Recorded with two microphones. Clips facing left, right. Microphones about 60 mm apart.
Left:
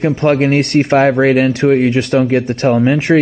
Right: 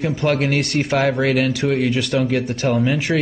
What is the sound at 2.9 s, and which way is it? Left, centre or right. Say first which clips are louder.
Speech: left 8 dB; left.